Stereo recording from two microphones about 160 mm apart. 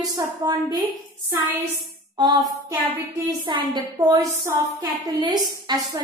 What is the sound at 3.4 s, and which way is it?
Speech, 25° right (ahead or behind).